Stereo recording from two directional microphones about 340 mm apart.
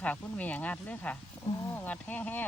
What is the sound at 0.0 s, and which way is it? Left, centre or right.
Speech, centre.